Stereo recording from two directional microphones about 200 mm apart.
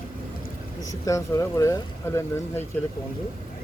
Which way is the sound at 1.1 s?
15° left (ahead or behind).